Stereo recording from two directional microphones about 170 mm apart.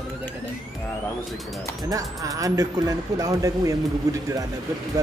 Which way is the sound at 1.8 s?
20° right (ahead or behind).